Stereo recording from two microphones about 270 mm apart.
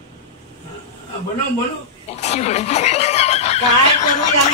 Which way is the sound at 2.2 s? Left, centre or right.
Left.